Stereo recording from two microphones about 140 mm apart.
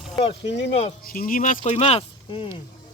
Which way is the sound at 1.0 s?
90° left.